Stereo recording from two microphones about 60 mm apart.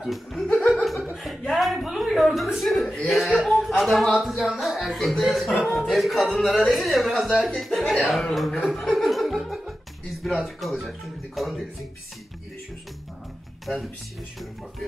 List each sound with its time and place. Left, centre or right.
0.0 s speech: centre
1.1 s chuckle: centre
1.5 s speech: centre
7.8 s speech: centre
8.1 s speech: centre
8.7 s laughter: centre
10.2 s speech: centre